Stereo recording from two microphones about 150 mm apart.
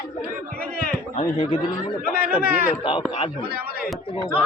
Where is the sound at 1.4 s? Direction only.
40° left (ahead or behind).